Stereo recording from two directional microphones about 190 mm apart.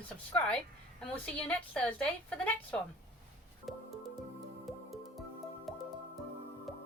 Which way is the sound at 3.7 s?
Centre (ahead or behind).